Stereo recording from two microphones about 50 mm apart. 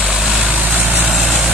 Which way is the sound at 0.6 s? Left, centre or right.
Right.